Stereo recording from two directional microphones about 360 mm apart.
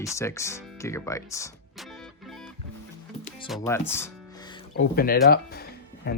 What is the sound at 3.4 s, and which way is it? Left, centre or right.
Speech, centre.